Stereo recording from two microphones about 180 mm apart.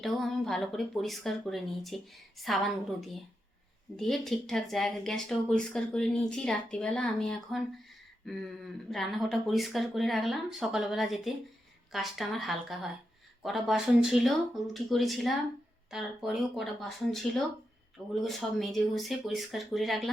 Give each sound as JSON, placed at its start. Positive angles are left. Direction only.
{"t": 0.0, "sound": "speech", "side_deg": 0}